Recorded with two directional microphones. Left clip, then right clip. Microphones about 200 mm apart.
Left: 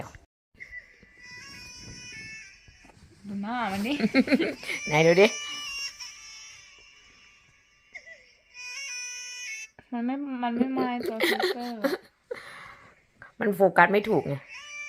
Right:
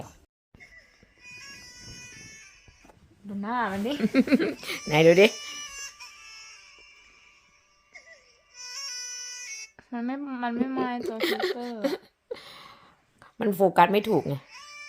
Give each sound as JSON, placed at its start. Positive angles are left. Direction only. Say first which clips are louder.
{"t": 3.4, "sound": "speech", "louder": "right 2 dB", "side_deg": -20}
{"t": 5.6, "sound": "music", "louder": "left 5 dB", "side_deg": -5}
{"t": 8.7, "sound": "bagpipes", "louder": "even", "side_deg": -5}
{"t": 9.7, "sound": "speech", "louder": "left 1 dB", "side_deg": 5}
{"t": 14.3, "sound": "a sound", "louder": "left 1 dB", "side_deg": -10}